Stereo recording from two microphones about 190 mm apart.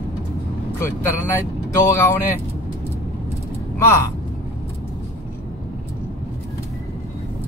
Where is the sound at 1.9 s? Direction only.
15° left (ahead or behind).